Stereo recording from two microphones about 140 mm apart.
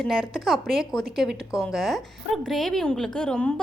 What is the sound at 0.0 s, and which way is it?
A woman's voice, centre (ahead or behind).